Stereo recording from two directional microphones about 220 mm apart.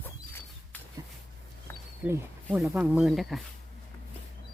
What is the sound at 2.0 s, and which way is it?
Speech, 10° right (ahead or behind).